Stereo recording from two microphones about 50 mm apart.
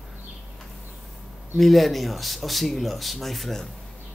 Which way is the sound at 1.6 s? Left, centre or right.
Centre.